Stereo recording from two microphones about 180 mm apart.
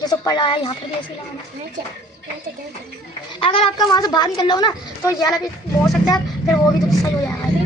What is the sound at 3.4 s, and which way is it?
A woman's voice, 30° left (ahead or behind).